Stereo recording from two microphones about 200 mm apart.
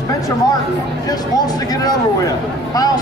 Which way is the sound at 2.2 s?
20° left (ahead or behind).